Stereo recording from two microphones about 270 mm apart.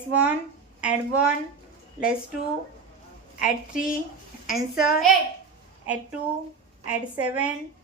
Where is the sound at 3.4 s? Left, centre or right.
Centre.